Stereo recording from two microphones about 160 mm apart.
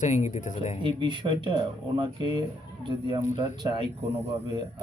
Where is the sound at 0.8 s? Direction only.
30° right (ahead or behind).